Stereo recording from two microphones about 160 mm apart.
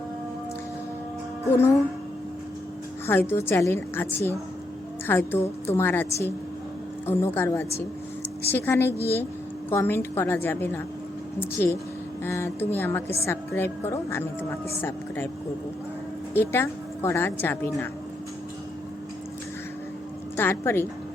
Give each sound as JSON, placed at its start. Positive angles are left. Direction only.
{"t": 1.5, "sound": "a woman's voice", "side_deg": 15}
{"t": 3.1, "sound": "a woman's voice", "side_deg": 15}
{"t": 7.1, "sound": "a woman's voice", "side_deg": 15}
{"t": 8.9, "sound": "a woman's voice", "side_deg": -15}
{"t": 9.6, "sound": "a woman's voice", "side_deg": 15}
{"t": 16.3, "sound": "a woman's voice", "side_deg": 15}
{"t": 20.3, "sound": "a woman's voice", "side_deg": 15}